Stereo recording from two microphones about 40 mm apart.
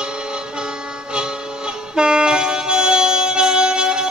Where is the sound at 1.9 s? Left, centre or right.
Right.